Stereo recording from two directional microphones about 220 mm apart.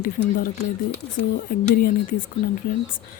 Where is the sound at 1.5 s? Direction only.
40° left (ahead or behind).